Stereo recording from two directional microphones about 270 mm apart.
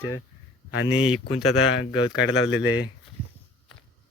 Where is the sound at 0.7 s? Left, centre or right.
Left.